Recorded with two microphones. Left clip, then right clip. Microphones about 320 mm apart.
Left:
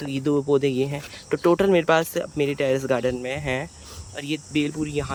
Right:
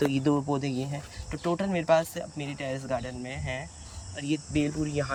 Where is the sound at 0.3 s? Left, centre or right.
Centre.